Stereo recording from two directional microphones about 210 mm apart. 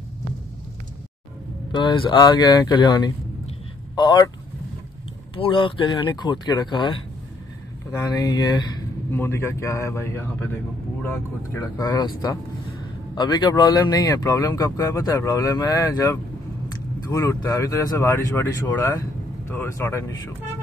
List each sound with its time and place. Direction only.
1.7 s speech: 20° left (ahead or behind)
5.3 s speech: 25° left (ahead or behind)
13.1 s speech: 20° left (ahead or behind)